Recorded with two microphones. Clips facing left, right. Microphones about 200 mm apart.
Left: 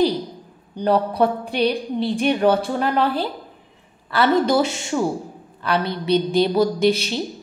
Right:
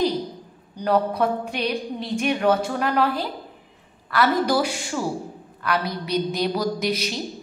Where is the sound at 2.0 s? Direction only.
30° left (ahead or behind).